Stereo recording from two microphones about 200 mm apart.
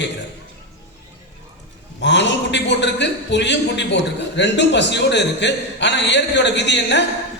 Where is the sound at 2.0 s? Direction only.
60° left (ahead or behind).